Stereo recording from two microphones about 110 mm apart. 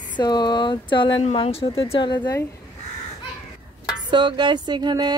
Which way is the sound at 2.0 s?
45° left (ahead or behind).